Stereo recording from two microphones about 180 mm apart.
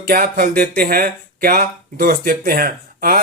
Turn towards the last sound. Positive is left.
turn(degrees=-55)  # may be behind; listen again after turning